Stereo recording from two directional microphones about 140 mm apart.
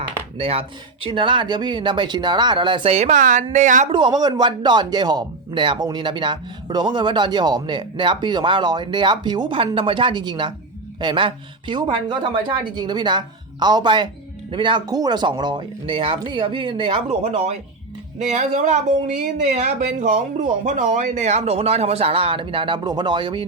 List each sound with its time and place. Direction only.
0.3 s speech: 45° right (ahead or behind); by 3.8 s 65° right (ahead or behind)
3.8 s speech: 35° right (ahead or behind)
18.2 s speech: 60° right (ahead or behind); by 23.5 s 35° right (ahead or behind)